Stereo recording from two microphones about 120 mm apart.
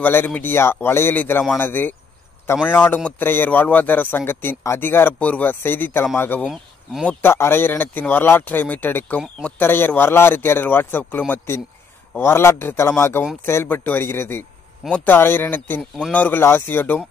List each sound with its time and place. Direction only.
0.0 s speech: 15° left (ahead or behind)
6.4 s speech: centre (ahead or behind)
7.1 s a man's voice: 20° left (ahead or behind)